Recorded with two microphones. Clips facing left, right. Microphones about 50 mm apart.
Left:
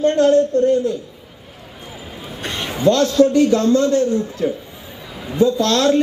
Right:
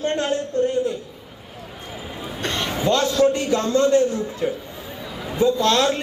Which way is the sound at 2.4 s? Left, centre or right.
Centre.